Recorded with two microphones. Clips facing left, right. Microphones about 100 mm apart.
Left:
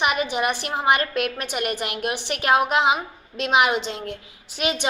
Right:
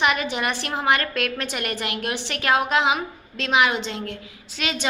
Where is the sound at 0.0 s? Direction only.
15° left (ahead or behind).